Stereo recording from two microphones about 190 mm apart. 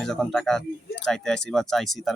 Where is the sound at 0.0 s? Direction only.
5° left (ahead or behind).